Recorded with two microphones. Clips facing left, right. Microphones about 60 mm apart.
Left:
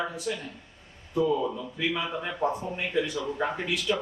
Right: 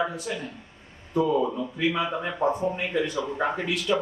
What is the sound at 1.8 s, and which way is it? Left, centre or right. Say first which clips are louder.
Speech: right 4 dB; centre.